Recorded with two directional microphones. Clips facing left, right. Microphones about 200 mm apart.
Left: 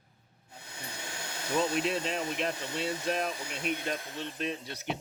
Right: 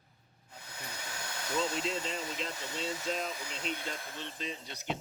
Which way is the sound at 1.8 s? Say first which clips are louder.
Left 4 dB; 60° left (ahead or behind).